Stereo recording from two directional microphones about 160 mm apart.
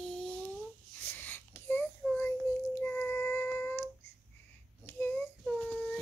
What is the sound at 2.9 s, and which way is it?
Female singing, 10° left (ahead or behind).